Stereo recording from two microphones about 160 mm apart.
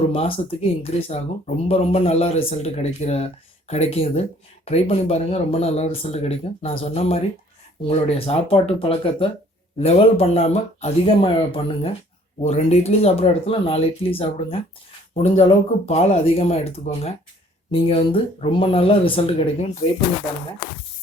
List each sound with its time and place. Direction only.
0.1 s speech: 35° left (ahead or behind)